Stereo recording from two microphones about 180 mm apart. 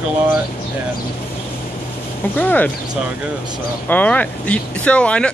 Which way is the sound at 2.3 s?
10° left (ahead or behind).